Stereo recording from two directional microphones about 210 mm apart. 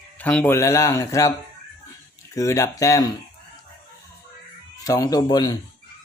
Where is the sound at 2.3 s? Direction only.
15° left (ahead or behind).